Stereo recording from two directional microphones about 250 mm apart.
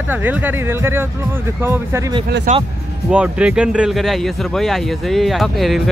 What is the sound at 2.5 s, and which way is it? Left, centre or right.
Speech, right.